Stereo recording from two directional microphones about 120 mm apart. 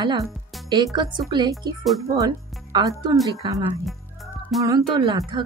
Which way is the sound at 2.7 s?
35° right (ahead or behind).